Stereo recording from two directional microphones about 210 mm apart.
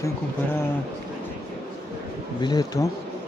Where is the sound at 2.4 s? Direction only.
20° left (ahead or behind).